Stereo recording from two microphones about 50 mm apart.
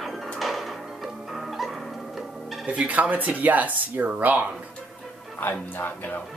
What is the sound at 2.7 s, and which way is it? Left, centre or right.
Speech, right.